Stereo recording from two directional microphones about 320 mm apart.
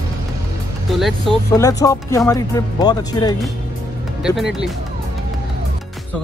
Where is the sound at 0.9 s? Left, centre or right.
Centre.